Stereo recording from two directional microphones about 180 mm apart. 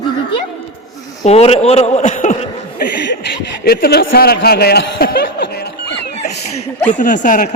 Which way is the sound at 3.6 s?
60° left (ahead or behind).